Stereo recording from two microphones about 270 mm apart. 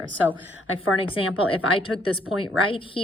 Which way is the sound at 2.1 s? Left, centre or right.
Centre.